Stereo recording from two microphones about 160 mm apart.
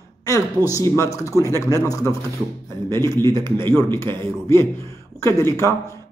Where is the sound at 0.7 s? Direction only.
20° left (ahead or behind).